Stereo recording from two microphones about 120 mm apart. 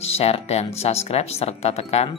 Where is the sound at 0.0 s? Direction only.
60° left (ahead or behind).